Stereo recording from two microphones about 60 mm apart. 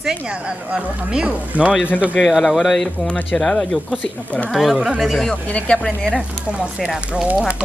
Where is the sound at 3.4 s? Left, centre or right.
Centre.